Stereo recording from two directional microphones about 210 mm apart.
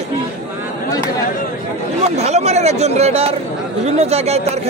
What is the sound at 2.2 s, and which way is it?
Speech, 30° right (ahead or behind).